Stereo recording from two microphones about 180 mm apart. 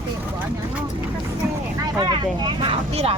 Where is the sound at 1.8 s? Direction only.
25° right (ahead or behind).